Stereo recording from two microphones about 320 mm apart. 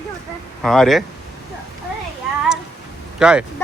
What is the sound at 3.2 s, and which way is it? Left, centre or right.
Speech, centre.